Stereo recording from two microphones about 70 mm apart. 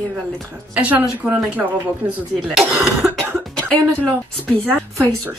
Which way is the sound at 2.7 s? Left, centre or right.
Centre.